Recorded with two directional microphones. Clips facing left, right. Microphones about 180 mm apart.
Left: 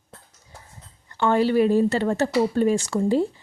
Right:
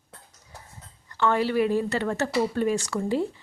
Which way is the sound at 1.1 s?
30° left (ahead or behind).